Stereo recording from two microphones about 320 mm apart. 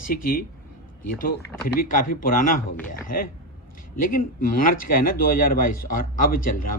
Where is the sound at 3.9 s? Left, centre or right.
Left.